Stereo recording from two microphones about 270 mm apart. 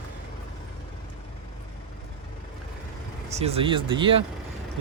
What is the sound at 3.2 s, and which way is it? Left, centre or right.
Speech, right.